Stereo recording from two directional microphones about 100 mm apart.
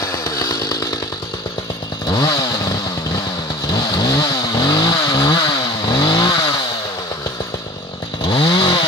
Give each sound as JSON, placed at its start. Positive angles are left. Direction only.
{"t": 0.0, "sound": "chainsaw", "side_deg": 30}
{"t": 2.0, "sound": "chainsaw", "side_deg": 40}
{"t": 3.7, "sound": "vehicle", "side_deg": 45}
{"t": 5.9, "sound": "chainsaw", "side_deg": 50}
{"t": 8.3, "sound": "chainsaw", "side_deg": 50}